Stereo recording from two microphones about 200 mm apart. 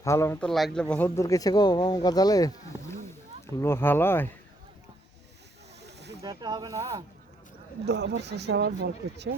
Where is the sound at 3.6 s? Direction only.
10° left (ahead or behind).